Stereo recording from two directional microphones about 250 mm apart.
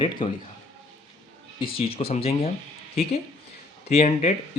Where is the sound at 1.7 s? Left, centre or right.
Left.